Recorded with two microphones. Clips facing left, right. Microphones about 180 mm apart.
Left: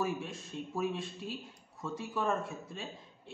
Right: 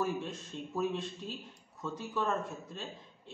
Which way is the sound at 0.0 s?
10° left (ahead or behind).